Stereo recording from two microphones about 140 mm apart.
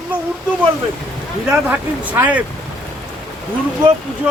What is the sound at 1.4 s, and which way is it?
Speech, 10° right (ahead or behind).